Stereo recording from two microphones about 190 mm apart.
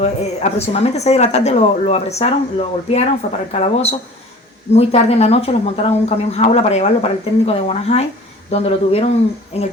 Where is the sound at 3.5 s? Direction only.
35° left (ahead or behind).